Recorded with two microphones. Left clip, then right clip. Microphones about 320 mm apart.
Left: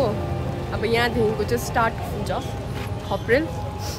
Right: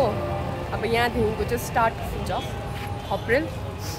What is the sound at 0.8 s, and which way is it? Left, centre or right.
Speech, centre.